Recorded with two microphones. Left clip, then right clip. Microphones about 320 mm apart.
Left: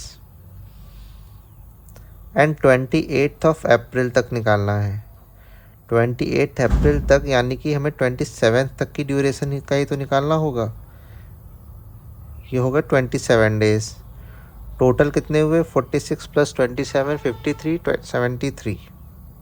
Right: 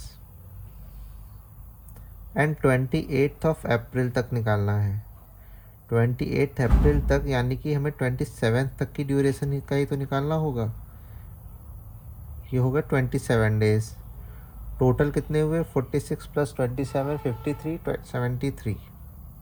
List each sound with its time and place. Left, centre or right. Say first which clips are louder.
2.3 s speech: left 8 dB; left
12.5 s speech: left 7 dB; left